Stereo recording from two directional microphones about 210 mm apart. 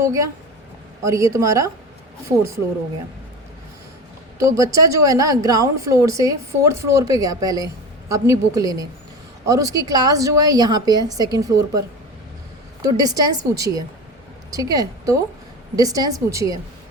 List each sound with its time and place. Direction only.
0.0 s a woman's voice: 15° right (ahead or behind)
4.4 s a woman's voice: 15° right (ahead or behind)
12.8 s a woman's voice: 15° right (ahead or behind)